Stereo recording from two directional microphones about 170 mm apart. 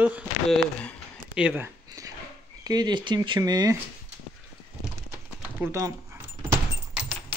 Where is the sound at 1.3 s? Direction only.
10° right (ahead or behind).